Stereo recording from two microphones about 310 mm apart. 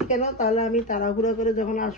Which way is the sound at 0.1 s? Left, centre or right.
Left.